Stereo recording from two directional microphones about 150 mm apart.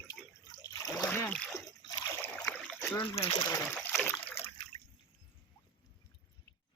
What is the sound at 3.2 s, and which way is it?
Speech, 30° left (ahead or behind).